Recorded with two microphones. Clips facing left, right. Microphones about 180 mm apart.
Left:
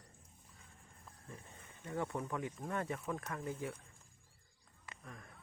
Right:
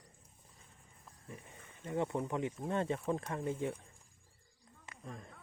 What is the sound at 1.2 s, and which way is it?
Speech, 15° right (ahead or behind).